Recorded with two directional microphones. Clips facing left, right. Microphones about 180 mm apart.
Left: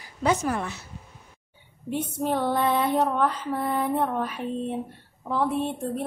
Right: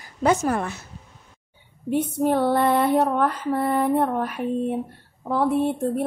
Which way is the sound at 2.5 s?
55° right (ahead or behind).